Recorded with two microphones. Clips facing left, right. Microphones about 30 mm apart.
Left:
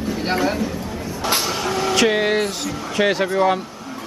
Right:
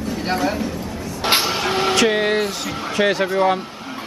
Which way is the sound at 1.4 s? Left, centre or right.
Right.